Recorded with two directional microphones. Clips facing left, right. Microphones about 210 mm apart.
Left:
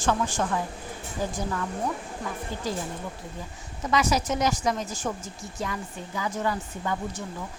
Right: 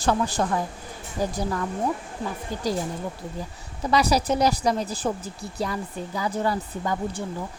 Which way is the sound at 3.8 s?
35° right (ahead or behind).